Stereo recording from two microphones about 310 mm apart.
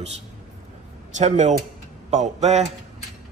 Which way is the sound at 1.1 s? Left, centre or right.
Right.